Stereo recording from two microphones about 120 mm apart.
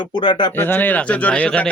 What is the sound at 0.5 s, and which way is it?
Speech, 15° left (ahead or behind).